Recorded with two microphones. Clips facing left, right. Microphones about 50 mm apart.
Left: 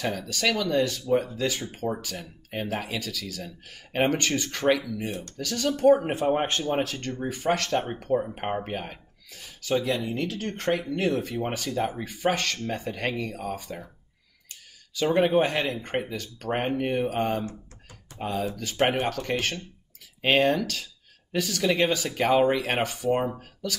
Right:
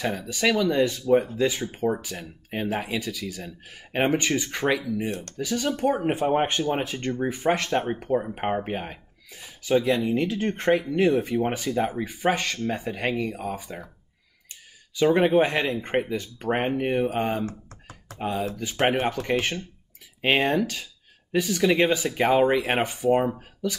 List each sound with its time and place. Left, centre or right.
0.1 s speech: centre
5.9 s speech: centre
6.1 s speech: centre
15.4 s speech: right
17.5 s computer keyboard: right
18.6 s speech: centre